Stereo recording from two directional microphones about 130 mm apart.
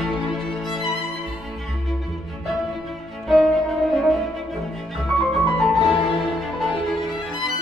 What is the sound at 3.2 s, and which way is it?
Music, centre (ahead or behind).